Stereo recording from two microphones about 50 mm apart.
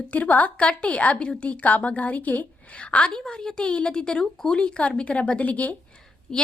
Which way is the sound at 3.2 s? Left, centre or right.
Centre.